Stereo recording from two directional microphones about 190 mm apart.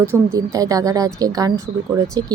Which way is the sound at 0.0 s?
15° right (ahead or behind).